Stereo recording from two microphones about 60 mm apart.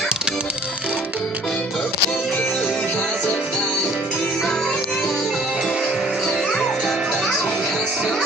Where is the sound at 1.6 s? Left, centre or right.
Centre.